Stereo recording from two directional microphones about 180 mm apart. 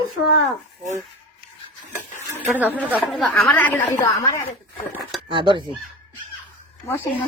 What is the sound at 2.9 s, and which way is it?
A woman's voice, 5° left (ahead or behind).